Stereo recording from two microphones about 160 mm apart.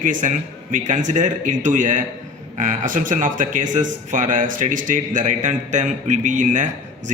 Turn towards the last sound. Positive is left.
turn(degrees=-50)  # may be behind; listen again after turning